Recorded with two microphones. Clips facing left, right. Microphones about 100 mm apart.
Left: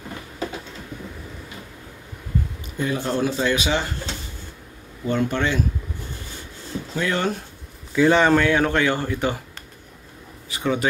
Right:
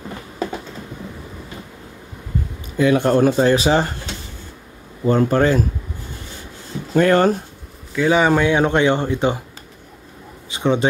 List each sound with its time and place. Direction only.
2.8 s speech: 65° right (ahead or behind); by 3.9 s 40° right (ahead or behind)
5.0 s speech: 40° right (ahead or behind)
6.9 s speech: 50° right (ahead or behind)
7.9 s a man's voice: 5° right (ahead or behind); by 9.4 s 20° right (ahead or behind)
10.5 s speech: 25° right (ahead or behind)